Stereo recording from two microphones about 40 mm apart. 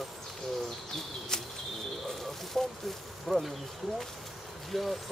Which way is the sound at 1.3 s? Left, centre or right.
Centre.